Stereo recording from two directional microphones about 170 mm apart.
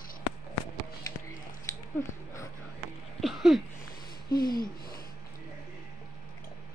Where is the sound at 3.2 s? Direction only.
Centre (ahead or behind).